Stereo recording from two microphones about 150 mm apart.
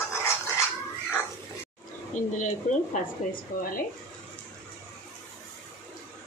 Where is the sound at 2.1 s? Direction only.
55° left (ahead or behind).